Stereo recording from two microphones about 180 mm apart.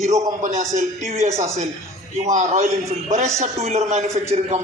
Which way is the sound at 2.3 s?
40° right (ahead or behind).